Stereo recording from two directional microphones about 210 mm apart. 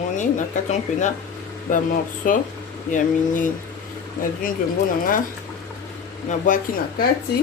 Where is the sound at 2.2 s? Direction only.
40° left (ahead or behind).